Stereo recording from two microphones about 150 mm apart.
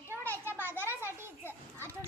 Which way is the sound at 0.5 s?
15° right (ahead or behind).